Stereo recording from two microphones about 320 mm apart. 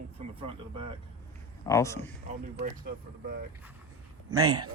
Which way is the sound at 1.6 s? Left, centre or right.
Centre.